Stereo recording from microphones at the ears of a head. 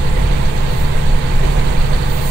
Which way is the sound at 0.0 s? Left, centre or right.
Right.